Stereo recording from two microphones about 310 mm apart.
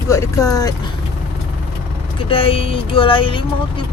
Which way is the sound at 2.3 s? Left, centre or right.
Centre.